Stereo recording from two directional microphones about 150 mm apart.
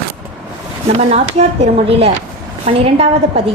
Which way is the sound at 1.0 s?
45° right (ahead or behind).